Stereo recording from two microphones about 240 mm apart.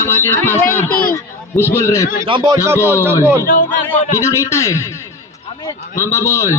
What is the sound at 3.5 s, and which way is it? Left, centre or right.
Speech, left.